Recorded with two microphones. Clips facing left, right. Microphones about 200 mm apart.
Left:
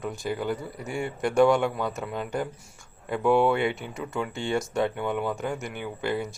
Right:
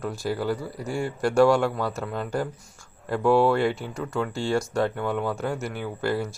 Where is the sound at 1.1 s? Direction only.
20° left (ahead or behind).